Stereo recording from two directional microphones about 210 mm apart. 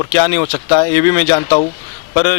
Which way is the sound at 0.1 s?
15° left (ahead or behind).